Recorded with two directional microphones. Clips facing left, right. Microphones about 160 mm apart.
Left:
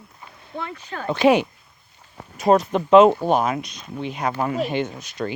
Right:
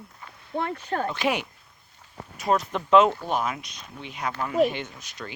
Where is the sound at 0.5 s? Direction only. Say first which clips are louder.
Right 4 dB; 45° right (ahead or behind).